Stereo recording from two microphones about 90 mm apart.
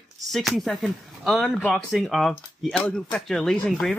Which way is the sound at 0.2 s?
Centre (ahead or behind).